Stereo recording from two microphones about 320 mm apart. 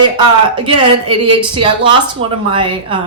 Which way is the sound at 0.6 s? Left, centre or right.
Centre.